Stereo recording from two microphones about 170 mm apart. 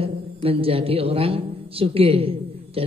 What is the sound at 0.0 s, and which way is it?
A woman's voice, 35° right (ahead or behind).